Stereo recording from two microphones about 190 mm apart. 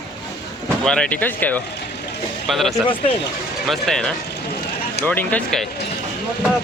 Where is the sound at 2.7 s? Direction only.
25° left (ahead or behind).